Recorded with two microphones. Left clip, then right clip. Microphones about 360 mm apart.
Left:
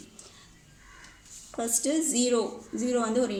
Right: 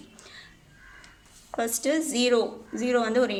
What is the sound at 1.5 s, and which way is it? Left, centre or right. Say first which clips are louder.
A woman's voice: right 2 dB; right.